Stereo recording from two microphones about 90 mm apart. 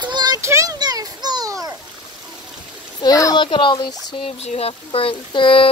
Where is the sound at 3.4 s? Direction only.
60° left (ahead or behind); by 5.7 s 75° left (ahead or behind).